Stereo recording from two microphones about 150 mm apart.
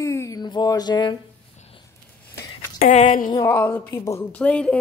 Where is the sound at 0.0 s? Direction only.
20° left (ahead or behind).